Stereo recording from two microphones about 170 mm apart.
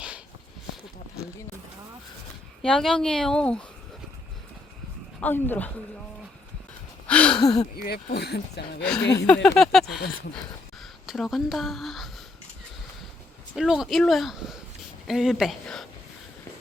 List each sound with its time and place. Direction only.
2.6 s speech: centre (ahead or behind)
5.2 s speech: 10° left (ahead or behind)
7.1 s a sound: 5° left (ahead or behind)
7.3 s speech: 25° left (ahead or behind)
7.8 s speech: 65° left (ahead or behind)
9.2 s speech: 5° left (ahead or behind)
13.6 s speech: 5° right (ahead or behind)